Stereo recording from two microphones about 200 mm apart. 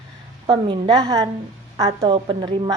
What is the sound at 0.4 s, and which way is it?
A woman's voice, 25° right (ahead or behind).